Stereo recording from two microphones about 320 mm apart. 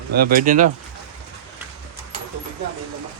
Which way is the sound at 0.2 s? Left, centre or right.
Right.